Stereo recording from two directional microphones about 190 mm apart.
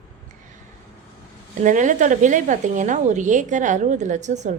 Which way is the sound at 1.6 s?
40° right (ahead or behind).